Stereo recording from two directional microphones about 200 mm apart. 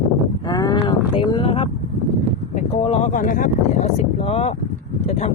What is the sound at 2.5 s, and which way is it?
Vehicle, 30° left (ahead or behind).